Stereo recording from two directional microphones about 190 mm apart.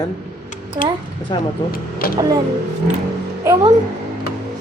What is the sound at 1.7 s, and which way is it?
Speech, 50° left (ahead or behind).